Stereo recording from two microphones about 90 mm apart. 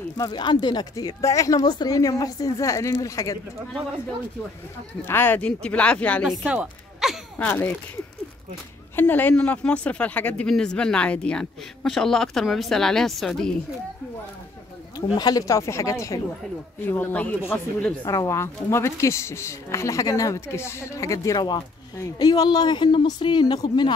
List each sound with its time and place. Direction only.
0.3 s a woman's voice: 60° left (ahead or behind); by 3.3 s 40° left (ahead or behind)
5.0 s speech: 25° left (ahead or behind)
6.4 s speech: 15° right (ahead or behind)
7.0 s a sound: 5° right (ahead or behind)
7.3 s speech: 20° left (ahead or behind)
8.9 s speech: 20° left (ahead or behind); by 13.6 s 5° left (ahead or behind)
15.1 s a woman's voice: 45° left (ahead or behind)
16.8 s speech: 25° left (ahead or behind)
18.0 s a woman's voice: 35° left (ahead or behind); by 23.9 s 50° left (ahead or behind)